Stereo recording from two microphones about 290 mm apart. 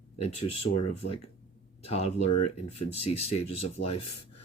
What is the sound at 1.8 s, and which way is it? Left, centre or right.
Speech, left.